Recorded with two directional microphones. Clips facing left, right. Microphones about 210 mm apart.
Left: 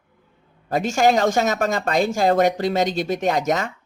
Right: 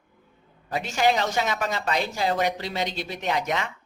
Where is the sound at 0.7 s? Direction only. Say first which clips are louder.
Left 5 dB; 45° left (ahead or behind).